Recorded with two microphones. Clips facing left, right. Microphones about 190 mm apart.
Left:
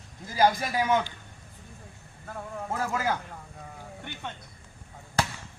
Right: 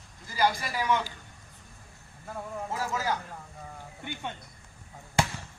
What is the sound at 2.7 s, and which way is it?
Speech, 55° left (ahead or behind).